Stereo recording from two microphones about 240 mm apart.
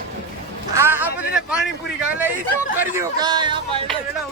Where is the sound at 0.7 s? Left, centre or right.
Centre.